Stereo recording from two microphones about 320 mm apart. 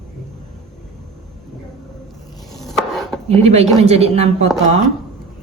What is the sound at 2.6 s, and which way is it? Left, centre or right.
Chopping, centre.